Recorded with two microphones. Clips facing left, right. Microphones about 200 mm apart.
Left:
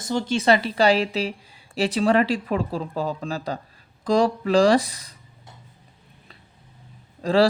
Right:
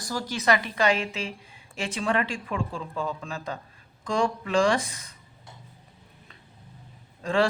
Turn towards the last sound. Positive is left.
turn(degrees=35)  # may be behind; listen again after turning